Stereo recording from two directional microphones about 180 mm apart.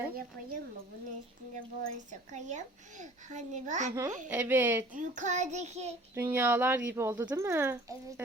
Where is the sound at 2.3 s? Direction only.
40° right (ahead or behind).